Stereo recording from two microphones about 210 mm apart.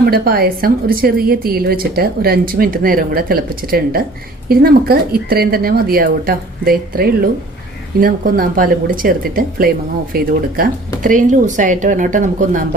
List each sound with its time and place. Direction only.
0.0 s a woman's voice: 45° right (ahead or behind)